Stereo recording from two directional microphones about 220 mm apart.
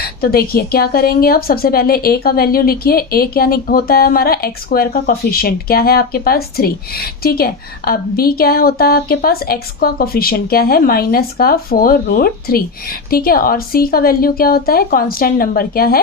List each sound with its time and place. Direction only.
0.2 s a woman's voice: 45° left (ahead or behind)